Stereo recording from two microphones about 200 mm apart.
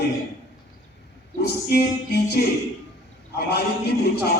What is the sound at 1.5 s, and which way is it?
A man's voice, 55° left (ahead or behind).